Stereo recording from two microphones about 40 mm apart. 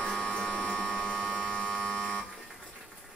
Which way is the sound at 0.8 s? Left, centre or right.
Left.